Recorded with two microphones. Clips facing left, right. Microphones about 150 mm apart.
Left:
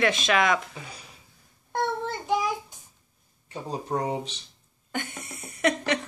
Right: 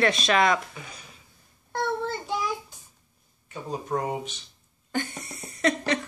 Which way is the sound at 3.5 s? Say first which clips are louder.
Even; 30° left (ahead or behind).